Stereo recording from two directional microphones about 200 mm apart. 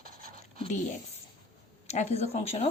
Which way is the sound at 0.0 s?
45° right (ahead or behind).